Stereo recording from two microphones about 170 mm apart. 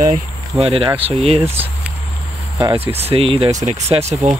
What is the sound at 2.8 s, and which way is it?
Speech, 35° right (ahead or behind).